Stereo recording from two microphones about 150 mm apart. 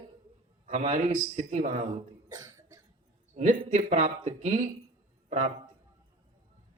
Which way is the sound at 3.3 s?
55° right (ahead or behind).